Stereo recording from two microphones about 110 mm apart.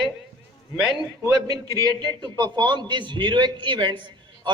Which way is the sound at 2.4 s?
45° right (ahead or behind).